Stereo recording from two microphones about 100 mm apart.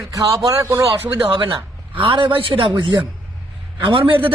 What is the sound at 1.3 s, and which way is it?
Speech, 55° right (ahead or behind).